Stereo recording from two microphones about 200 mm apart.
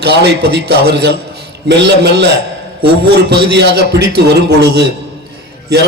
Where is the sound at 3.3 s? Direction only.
55° right (ahead or behind).